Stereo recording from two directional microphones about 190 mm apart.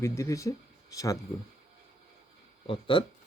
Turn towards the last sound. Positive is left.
turn(degrees=25)  # may be behind; listen again after turning